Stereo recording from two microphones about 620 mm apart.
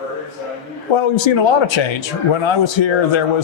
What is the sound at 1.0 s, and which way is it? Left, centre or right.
A man's voice, left.